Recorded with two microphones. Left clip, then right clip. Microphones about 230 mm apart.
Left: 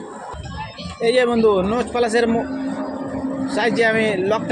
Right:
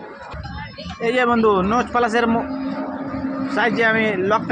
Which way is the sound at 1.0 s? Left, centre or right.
Right.